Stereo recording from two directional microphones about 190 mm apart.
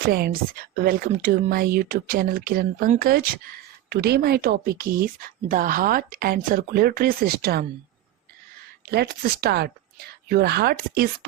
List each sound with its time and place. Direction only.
0.1 s speech: 50° right (ahead or behind)
8.9 s speech: 55° right (ahead or behind)